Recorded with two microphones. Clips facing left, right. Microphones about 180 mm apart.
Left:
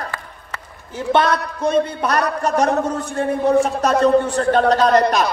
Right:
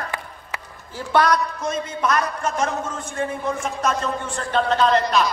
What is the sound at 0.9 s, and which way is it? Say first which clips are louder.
A man's voice: left 2 dB; 25° left (ahead or behind).